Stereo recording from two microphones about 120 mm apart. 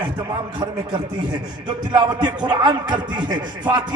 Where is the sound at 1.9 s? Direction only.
35° right (ahead or behind).